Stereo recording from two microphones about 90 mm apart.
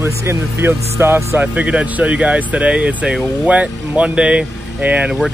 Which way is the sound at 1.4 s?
15° right (ahead or behind).